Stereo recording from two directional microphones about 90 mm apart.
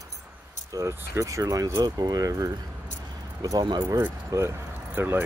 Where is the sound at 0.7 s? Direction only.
35° right (ahead or behind).